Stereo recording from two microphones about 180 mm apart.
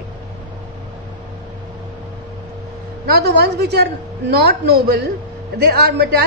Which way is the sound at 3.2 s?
70° right (ahead or behind).